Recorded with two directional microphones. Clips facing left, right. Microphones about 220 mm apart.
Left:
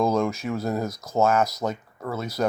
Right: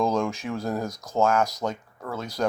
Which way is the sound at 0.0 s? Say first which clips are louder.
Left 2 dB; 5° left (ahead or behind).